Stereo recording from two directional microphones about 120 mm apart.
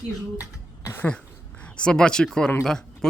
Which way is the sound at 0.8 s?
25° left (ahead or behind).